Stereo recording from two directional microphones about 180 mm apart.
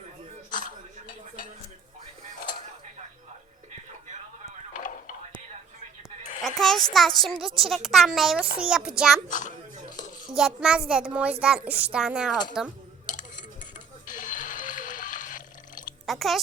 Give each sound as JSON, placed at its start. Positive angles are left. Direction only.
{"t": 4.7, "sound": "a sound", "side_deg": 45}
{"t": 6.4, "sound": "a sound", "side_deg": 0}
{"t": 6.9, "sound": "a child's voice", "side_deg": 0}
{"t": 10.2, "sound": "a child's voice", "side_deg": -5}
{"t": 13.1, "sound": "music", "side_deg": 45}
{"t": 16.0, "sound": "speech", "side_deg": 0}